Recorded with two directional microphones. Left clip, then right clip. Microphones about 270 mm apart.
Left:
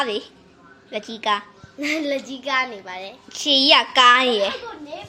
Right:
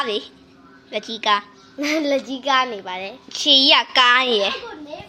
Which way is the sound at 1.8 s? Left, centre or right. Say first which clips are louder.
Right 3 dB; right.